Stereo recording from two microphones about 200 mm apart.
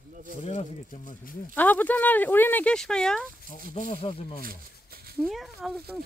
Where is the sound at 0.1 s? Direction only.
40° right (ahead or behind).